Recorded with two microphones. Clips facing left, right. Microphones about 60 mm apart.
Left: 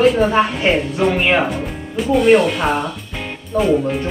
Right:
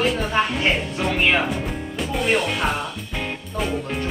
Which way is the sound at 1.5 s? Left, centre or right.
Centre.